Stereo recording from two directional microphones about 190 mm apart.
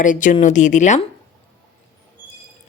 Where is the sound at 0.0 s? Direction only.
40° left (ahead or behind).